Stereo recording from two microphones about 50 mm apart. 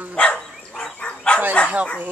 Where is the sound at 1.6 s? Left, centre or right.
Left.